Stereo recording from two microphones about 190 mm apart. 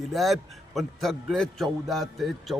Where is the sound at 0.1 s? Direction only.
Centre (ahead or behind).